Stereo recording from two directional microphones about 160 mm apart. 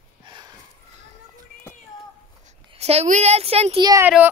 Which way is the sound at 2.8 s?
40° right (ahead or behind).